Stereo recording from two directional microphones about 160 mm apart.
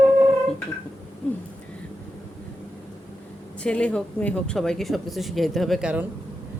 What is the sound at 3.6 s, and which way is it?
Speech, 5° left (ahead or behind).